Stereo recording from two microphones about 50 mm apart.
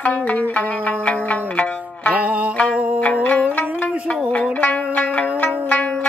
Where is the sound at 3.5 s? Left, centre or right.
Left.